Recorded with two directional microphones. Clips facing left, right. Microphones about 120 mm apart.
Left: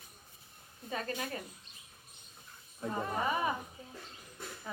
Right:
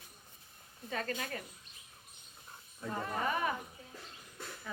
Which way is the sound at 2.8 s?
15° left (ahead or behind).